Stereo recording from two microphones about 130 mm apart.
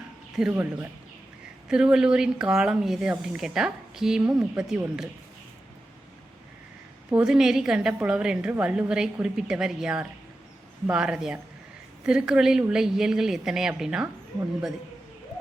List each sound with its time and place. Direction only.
0.5 s speech: 15° right (ahead or behind)
7.1 s speech: 5° right (ahead or behind)